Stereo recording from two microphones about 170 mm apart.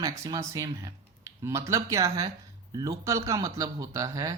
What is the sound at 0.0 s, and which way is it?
Speech, 20° right (ahead or behind).